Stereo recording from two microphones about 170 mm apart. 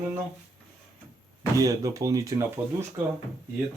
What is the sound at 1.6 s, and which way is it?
Speech, 20° right (ahead or behind).